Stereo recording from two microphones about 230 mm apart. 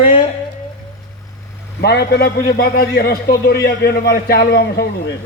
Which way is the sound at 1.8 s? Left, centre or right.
Left.